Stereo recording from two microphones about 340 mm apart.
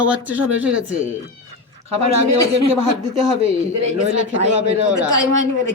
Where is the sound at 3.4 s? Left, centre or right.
Centre.